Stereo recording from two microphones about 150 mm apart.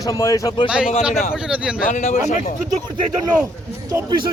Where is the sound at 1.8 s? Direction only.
55° left (ahead or behind).